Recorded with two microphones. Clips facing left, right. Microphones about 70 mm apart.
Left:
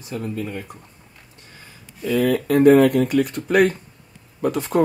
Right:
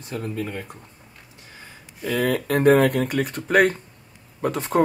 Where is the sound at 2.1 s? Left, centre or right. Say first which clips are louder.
Left 3 dB; right.